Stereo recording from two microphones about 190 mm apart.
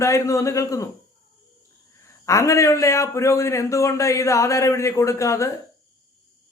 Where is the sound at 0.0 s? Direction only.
15° left (ahead or behind).